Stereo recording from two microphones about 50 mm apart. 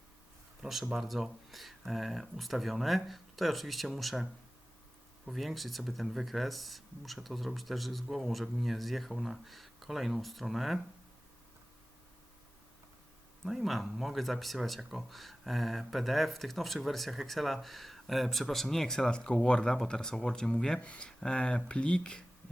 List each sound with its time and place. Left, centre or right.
0.6 s speech: centre
5.2 s speech: centre
13.4 s speech: centre